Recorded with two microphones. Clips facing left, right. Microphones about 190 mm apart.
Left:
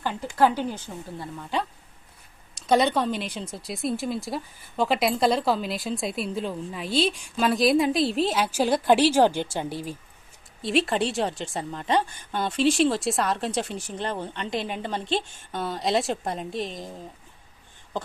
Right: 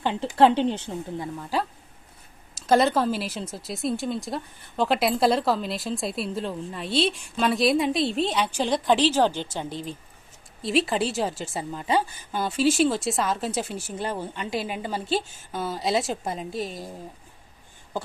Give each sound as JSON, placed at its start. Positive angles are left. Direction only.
{"t": 0.0, "sound": "speech", "side_deg": -20}
{"t": 1.4, "sound": "speech", "side_deg": -5}
{"t": 2.6, "sound": "speech", "side_deg": 0}